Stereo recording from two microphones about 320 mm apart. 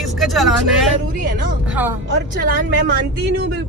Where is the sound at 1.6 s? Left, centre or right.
Centre.